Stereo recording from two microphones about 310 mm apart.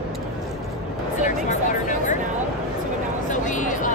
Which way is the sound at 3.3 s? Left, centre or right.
Left.